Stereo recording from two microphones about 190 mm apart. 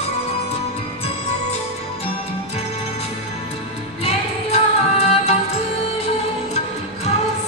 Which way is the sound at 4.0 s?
35° left (ahead or behind).